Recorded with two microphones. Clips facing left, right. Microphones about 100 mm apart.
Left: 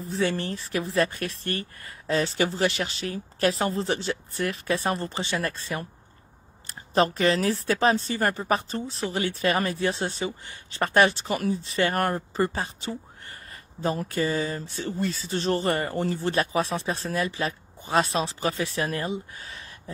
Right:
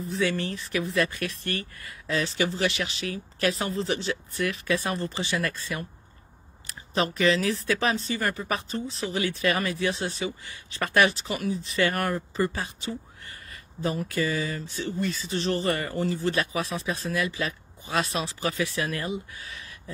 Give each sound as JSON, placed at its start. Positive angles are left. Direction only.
{"t": 0.1, "sound": "speech", "side_deg": 35}
{"t": 6.9, "sound": "speech", "side_deg": 40}